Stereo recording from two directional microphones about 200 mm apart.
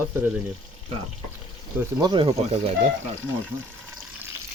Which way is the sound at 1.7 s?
20° right (ahead or behind).